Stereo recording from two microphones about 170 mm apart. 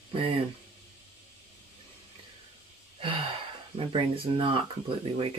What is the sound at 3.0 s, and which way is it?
Speech, 30° right (ahead or behind).